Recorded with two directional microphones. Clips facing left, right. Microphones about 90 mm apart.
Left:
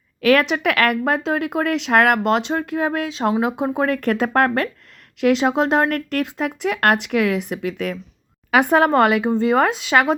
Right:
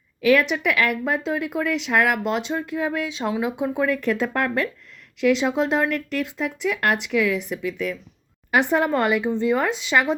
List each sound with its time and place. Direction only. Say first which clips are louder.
0.2 s speech: left 2 dB; 80° left
8.7 s speech: left 7 dB; 85° left